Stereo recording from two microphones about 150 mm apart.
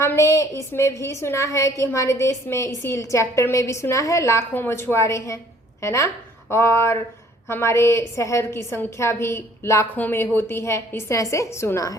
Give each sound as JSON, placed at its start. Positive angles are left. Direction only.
{"t": 0.0, "sound": "a woman's voice", "side_deg": 20}